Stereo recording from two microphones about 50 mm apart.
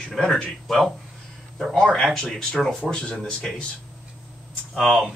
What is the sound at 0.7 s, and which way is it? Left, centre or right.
Speech, centre.